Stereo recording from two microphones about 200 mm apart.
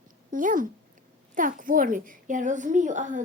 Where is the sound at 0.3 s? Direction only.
40° right (ahead or behind).